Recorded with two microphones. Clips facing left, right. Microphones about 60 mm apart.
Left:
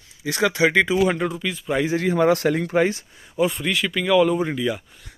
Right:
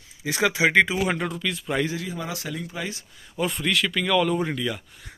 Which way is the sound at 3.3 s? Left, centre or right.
Centre.